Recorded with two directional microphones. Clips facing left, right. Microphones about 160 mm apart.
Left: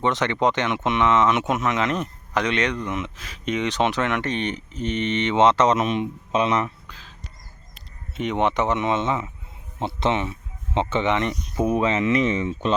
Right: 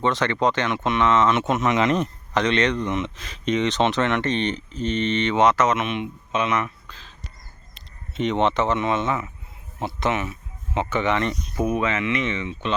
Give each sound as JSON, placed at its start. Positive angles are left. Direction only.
{"t": 0.0, "sound": "speech", "side_deg": 20}
{"t": 1.6, "sound": "speech", "side_deg": 0}
{"t": 6.8, "sound": "a sound", "side_deg": 10}
{"t": 7.8, "sound": "speech", "side_deg": 10}